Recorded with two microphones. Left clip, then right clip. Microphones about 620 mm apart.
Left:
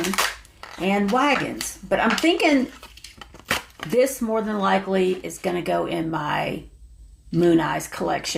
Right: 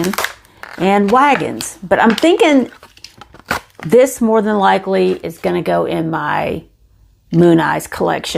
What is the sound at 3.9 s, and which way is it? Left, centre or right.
Speech, right.